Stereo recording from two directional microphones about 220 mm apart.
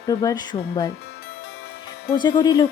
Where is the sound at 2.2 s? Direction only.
20° left (ahead or behind).